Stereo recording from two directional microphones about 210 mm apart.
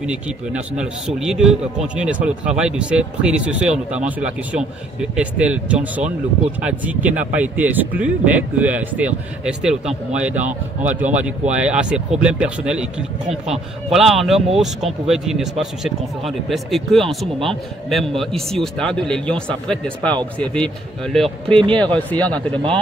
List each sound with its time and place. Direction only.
0.0 s a man's voice: 5° right (ahead or behind)
21.5 s speech: 20° right (ahead or behind)
21.9 s speech: 5° left (ahead or behind)